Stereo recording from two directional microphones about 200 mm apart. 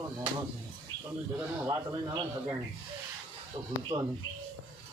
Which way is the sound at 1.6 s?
15° right (ahead or behind).